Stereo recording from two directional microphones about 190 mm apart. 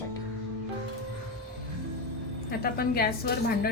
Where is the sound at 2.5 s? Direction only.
50° left (ahead or behind).